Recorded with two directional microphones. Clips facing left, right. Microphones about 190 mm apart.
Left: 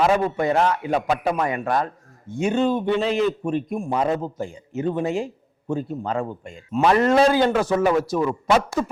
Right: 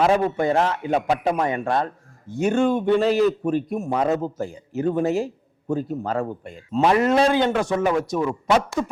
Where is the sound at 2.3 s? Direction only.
45° right (ahead or behind).